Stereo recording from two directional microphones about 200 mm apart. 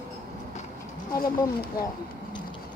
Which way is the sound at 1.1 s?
45° left (ahead or behind).